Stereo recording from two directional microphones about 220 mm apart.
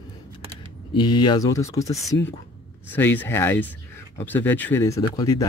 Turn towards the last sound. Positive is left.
turn(degrees=15)  # may be behind; listen again after turning